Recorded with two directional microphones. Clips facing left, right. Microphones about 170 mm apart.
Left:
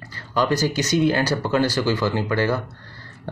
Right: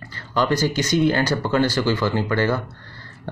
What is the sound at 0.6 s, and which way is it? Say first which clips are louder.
Speech: right 1 dB; 40° left (ahead or behind).